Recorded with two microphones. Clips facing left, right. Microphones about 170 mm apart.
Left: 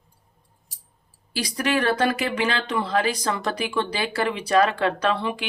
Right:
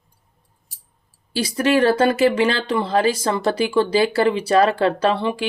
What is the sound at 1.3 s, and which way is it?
Speech, 30° right (ahead or behind).